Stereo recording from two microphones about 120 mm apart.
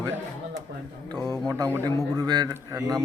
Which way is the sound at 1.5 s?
25° right (ahead or behind).